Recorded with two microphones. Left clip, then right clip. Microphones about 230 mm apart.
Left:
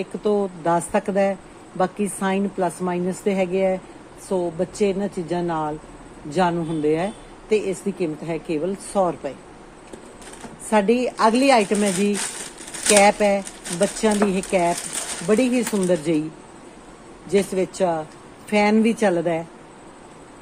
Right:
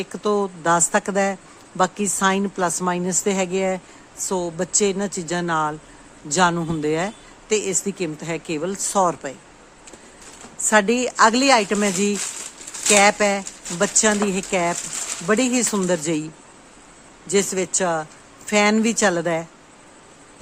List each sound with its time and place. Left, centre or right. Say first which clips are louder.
0.0 s speech: even; right
10.7 s speech: right 1 dB; right
17.2 s speech: even; right